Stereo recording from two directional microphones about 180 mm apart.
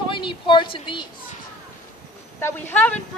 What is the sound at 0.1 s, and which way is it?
Speech, 25° left (ahead or behind).